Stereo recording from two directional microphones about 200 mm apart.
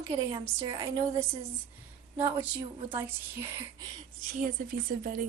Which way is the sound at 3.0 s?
10° right (ahead or behind).